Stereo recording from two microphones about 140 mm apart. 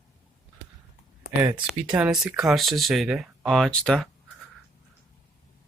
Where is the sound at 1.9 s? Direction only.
5° right (ahead or behind).